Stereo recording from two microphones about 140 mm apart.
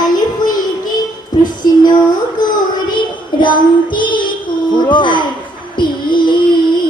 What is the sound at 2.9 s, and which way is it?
Child singing, 35° left (ahead or behind).